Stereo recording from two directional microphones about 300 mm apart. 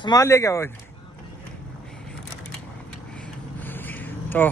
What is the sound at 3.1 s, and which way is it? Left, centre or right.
Vehicle, centre.